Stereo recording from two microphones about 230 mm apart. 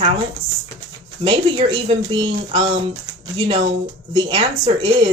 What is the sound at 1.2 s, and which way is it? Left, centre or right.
Speech, right.